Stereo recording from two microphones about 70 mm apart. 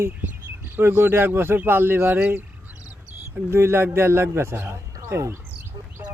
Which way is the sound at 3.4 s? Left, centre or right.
Right.